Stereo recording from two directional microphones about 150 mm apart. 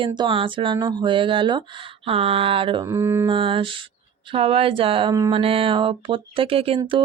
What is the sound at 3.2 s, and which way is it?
Speech, 35° right (ahead or behind).